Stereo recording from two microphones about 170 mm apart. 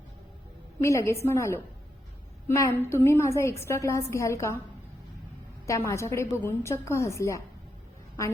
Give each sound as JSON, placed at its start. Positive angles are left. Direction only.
{"t": 0.8, "sound": "a woman's voice", "side_deg": 15}
{"t": 5.6, "sound": "a woman's voice", "side_deg": 15}